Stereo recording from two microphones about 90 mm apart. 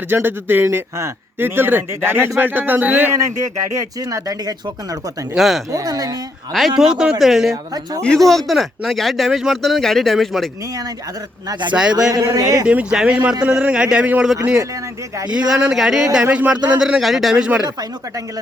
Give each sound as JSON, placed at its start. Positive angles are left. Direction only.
{"t": 0.1, "sound": "speech", "side_deg": -25}
{"t": 3.8, "sound": "speech", "side_deg": -40}
{"t": 5.4, "sound": "speech", "side_deg": 0}
{"t": 5.7, "sound": "speech", "side_deg": -45}
{"t": 6.5, "sound": "speech", "side_deg": -5}
{"t": 7.5, "sound": "speech", "side_deg": -45}
{"t": 8.0, "sound": "speech", "side_deg": 5}
{"t": 11.7, "sound": "speech", "side_deg": -10}
{"t": 12.1, "sound": "speech", "side_deg": -40}
{"t": 12.6, "sound": "speech", "side_deg": -10}
{"t": 15.3, "sound": "speech", "side_deg": -10}